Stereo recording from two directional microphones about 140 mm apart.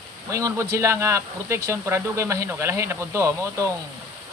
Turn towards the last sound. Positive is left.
turn(degrees=-20)  # may be behind; listen again after turning